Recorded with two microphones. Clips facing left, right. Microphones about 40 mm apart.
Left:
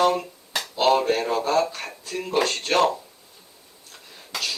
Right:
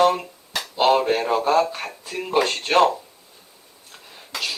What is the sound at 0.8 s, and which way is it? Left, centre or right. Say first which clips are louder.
Speech: right 2 dB; centre.